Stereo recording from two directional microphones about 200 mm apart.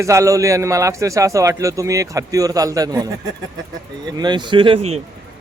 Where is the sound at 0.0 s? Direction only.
15° right (ahead or behind).